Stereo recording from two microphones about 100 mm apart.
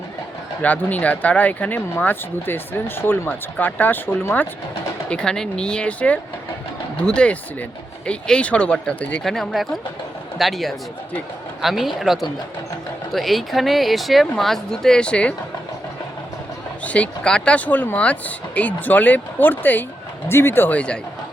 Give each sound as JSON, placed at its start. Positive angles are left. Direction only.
{"t": 0.6, "sound": "speech", "side_deg": 15}
{"t": 5.0, "sound": "speech", "side_deg": 10}
{"t": 9.2, "sound": "a man's voice", "side_deg": 5}
{"t": 16.8, "sound": "speech", "side_deg": 15}